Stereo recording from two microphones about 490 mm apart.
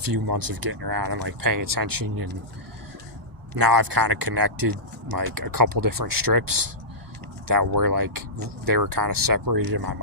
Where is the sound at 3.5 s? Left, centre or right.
Right.